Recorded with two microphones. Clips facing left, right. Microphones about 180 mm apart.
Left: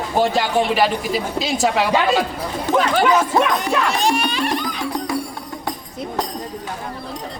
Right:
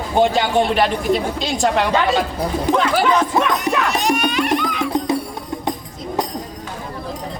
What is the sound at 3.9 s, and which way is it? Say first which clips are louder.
Music: right 1 dB; 30° left (ahead or behind).